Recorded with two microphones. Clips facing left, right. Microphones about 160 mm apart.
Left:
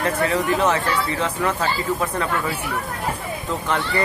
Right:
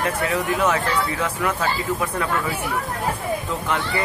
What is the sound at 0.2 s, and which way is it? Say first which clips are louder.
Speech: left 3 dB; 30° left (ahead or behind).